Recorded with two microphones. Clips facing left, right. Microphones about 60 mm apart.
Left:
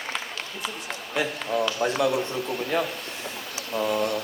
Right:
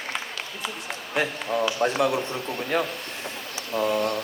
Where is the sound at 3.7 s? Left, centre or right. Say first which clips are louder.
Right 1 dB; centre.